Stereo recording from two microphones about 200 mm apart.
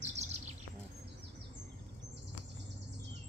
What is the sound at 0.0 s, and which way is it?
Chirp, 35° right (ahead or behind).